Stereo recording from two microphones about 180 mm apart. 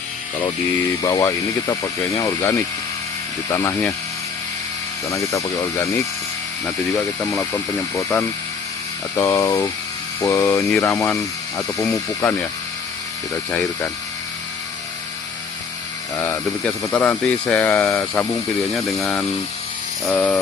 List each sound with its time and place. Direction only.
1.0 s speech: 15° left (ahead or behind)
5.0 s speech: 15° left (ahead or behind)
7.3 s speech: 15° left (ahead or behind)
16.1 s speech: 10° left (ahead or behind)
18.7 s speech: centre (ahead or behind)